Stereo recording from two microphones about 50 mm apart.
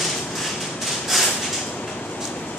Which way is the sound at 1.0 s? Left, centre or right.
Centre.